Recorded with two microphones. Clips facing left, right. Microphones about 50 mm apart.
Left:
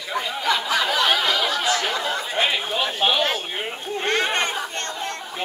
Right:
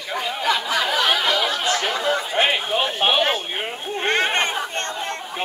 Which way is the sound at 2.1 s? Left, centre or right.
Right.